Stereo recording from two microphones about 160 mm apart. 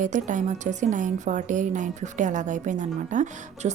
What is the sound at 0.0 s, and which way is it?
A woman's voice, 50° right (ahead or behind).